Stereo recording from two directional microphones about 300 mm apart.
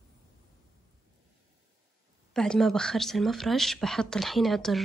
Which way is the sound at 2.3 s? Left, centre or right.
Centre.